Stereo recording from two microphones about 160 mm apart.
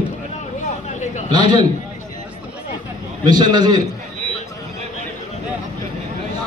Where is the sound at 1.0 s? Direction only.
45° left (ahead or behind).